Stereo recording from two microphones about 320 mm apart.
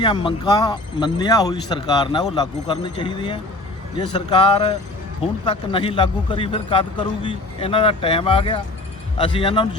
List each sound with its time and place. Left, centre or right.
0.0 s a man's voice: centre